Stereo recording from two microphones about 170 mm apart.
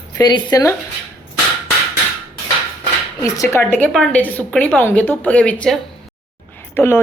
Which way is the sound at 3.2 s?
20° left (ahead or behind).